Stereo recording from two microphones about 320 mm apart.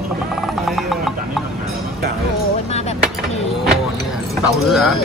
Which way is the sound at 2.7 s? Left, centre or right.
Centre.